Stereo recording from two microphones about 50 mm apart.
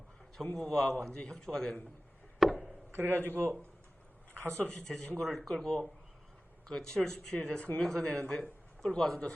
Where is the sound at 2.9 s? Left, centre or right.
Right.